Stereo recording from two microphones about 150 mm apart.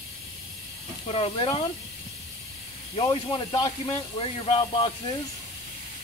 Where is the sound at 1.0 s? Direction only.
40° left (ahead or behind).